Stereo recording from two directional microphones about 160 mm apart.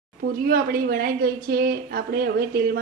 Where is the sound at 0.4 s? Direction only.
70° right (ahead or behind).